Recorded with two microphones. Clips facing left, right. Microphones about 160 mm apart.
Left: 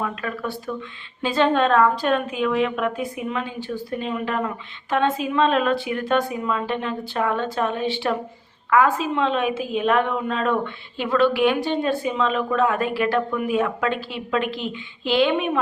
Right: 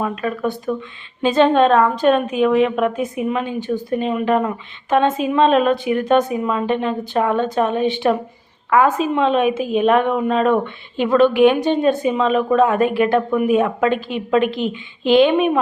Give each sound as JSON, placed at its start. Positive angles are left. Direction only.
{"t": 0.0, "sound": "a woman's voice", "side_deg": -25}